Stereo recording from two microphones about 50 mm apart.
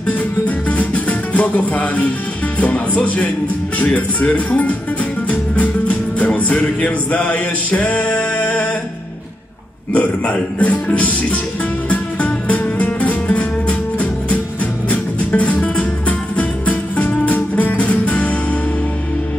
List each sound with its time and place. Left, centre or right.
0.7 s music: left
2.6 s speech: left
5.3 s music: left
9.9 s speech: left
11.9 s music: left